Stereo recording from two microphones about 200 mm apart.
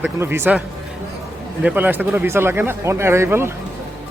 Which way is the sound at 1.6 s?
10° right (ahead or behind).